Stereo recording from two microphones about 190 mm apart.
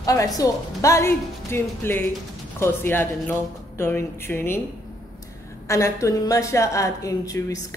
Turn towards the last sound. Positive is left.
turn(degrees=15)  # may be behind; listen again after turning